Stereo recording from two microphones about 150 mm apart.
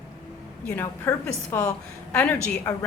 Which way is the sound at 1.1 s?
15° left (ahead or behind).